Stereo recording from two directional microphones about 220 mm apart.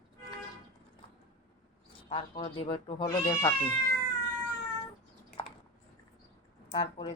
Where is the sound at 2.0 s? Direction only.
30° left (ahead or behind).